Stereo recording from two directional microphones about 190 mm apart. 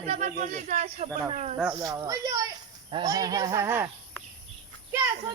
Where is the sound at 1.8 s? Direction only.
20° right (ahead or behind).